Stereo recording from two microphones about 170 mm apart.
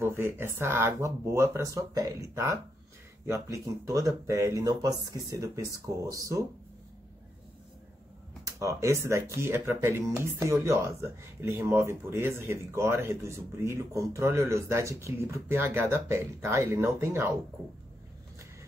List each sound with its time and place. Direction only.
0.0 s speech: 15° right (ahead or behind)
8.5 s speech: 20° right (ahead or behind)